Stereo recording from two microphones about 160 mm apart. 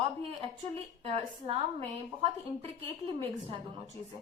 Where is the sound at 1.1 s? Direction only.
40° right (ahead or behind).